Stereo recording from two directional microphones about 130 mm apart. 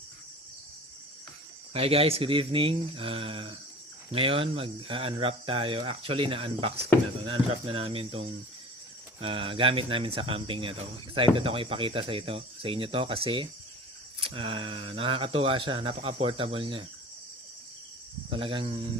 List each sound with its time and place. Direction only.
1.7 s speech: 45° right (ahead or behind)
18.3 s speech: 45° right (ahead or behind)